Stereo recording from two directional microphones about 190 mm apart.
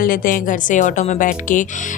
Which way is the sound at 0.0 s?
50° left (ahead or behind).